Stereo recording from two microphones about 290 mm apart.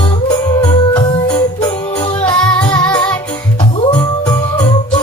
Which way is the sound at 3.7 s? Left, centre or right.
Centre.